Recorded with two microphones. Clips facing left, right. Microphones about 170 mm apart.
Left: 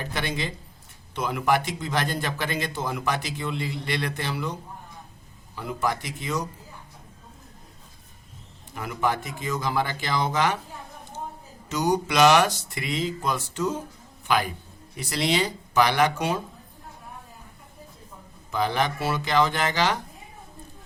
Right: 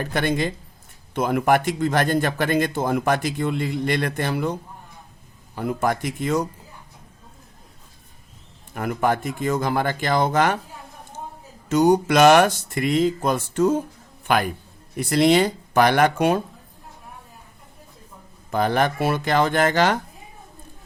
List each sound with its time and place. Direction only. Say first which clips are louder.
0.0 s a man's voice: right 7 dB; 50° right (ahead or behind)
5.5 s a man's voice: right 5 dB; 50° right (ahead or behind)
8.7 s a man's voice: right 5 dB; 55° right (ahead or behind)
11.7 s a man's voice: right 7 dB; 50° right (ahead or behind)
18.5 s a man's voice: right 5 dB; 50° right (ahead or behind)